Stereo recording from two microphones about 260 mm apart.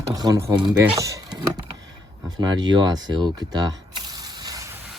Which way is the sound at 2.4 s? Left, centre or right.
Centre.